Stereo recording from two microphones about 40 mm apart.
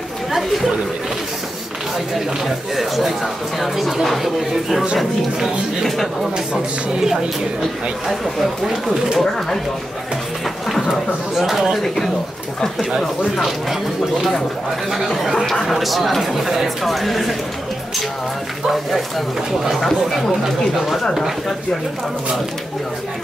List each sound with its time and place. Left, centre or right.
0.3 s chatter: centre
2.1 s speech: centre
6.3 s speech: centre
8.6 s speech: centre
10.7 s a sound: centre
11.3 s speech: centre
14.9 s speech: centre
18.7 s speech: centre
20.4 s speech: centre